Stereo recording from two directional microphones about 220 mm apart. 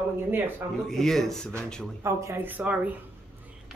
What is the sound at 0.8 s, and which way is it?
Speech, centre (ahead or behind).